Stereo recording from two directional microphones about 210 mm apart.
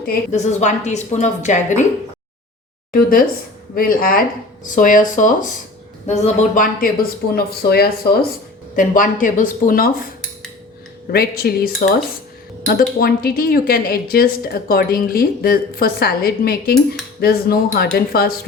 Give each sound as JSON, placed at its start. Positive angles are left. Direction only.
{"t": 0.0, "sound": "a woman's voice", "side_deg": 40}
{"t": 2.9, "sound": "a woman's voice", "side_deg": 45}
{"t": 11.1, "sound": "speech", "side_deg": 45}